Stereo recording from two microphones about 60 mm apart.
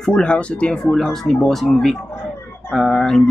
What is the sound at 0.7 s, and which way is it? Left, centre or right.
Speech, centre.